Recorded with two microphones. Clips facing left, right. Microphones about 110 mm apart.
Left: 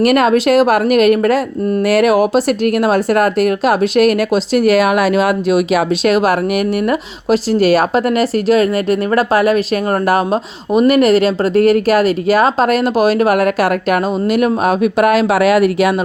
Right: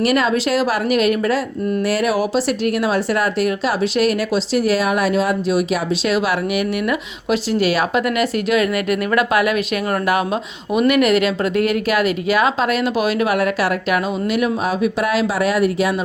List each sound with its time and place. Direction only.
0.0 s speech: 55° left (ahead or behind)
6.8 s speech: 45° left (ahead or behind)
15.4 s speech: 75° left (ahead or behind)